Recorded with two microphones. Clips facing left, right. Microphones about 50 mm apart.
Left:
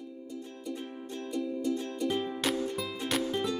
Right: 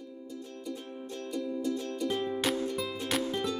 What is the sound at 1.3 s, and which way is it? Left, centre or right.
Music, centre.